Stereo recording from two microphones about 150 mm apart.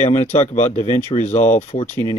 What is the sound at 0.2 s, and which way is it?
Speech, 50° left (ahead or behind).